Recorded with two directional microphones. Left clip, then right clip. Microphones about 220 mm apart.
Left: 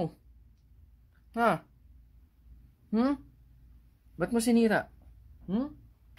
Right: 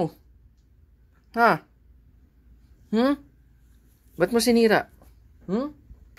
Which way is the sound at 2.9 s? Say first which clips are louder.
Right 7 dB; 10° right (ahead or behind).